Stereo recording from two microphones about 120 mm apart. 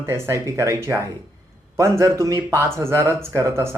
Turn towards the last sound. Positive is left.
turn(degrees=-20)  # may be behind; listen again after turning